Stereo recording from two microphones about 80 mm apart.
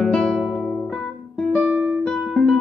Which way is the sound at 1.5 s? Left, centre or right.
Centre.